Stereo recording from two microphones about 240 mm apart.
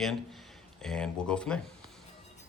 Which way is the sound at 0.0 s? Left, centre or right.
Centre.